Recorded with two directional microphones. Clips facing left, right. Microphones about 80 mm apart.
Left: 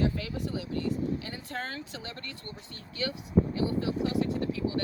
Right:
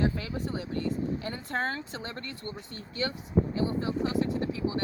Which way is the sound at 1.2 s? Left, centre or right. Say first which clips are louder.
Right 5 dB; right.